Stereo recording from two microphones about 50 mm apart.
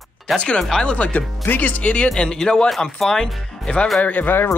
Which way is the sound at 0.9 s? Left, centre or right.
Left.